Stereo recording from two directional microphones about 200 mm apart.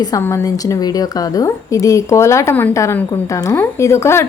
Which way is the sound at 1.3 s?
15° left (ahead or behind).